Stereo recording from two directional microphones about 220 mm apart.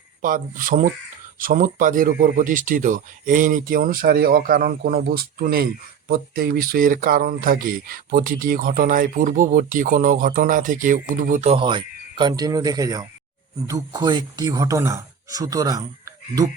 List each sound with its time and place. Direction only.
0.2 s speech: 35° right (ahead or behind); by 16.5 s 15° right (ahead or behind)